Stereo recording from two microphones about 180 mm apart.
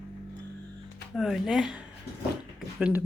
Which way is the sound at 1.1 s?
Centre (ahead or behind).